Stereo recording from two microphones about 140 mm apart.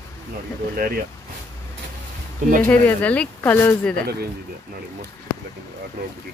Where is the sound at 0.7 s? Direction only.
90° right.